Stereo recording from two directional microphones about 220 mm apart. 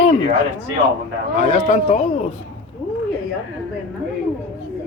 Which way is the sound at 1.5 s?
35° left (ahead or behind).